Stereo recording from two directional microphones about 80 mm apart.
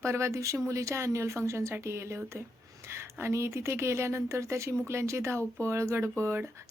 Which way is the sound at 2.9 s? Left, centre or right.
Right.